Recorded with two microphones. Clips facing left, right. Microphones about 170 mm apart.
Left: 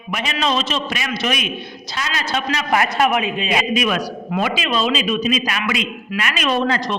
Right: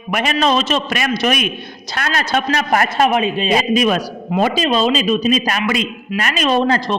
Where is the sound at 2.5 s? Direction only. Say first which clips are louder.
Even; 40° right (ahead or behind).